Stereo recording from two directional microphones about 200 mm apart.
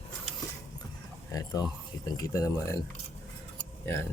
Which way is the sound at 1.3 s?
20° left (ahead or behind).